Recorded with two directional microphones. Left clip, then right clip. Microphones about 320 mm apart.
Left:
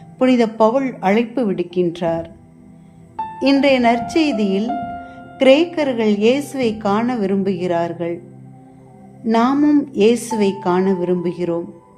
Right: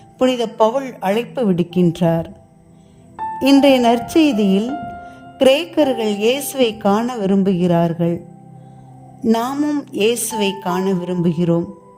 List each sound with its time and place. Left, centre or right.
0.2 s speech: right
3.3 s speech: right
9.2 s speech: right